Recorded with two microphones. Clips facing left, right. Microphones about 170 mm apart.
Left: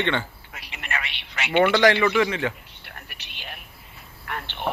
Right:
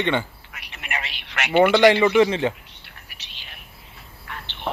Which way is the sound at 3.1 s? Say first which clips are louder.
Left 7 dB; 55° left (ahead or behind).